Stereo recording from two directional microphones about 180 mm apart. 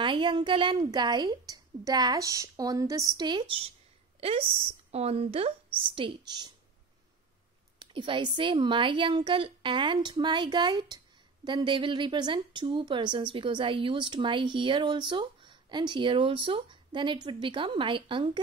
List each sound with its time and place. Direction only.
0.0 s a woman's voice: 25° right (ahead or behind)
7.8 s speech: 30° right (ahead or behind)